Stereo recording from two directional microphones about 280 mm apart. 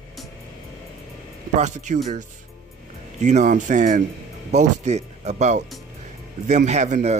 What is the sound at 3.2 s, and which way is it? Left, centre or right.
Speech, right.